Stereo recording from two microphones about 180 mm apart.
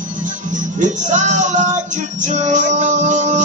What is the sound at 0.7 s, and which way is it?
Music, 40° right (ahead or behind).